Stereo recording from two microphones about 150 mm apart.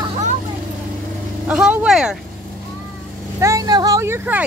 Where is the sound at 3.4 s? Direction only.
25° right (ahead or behind).